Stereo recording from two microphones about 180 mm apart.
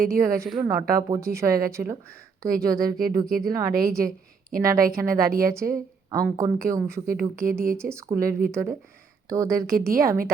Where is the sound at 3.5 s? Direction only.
15° right (ahead or behind).